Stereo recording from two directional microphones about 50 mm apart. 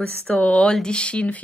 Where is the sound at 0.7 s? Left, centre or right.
Centre.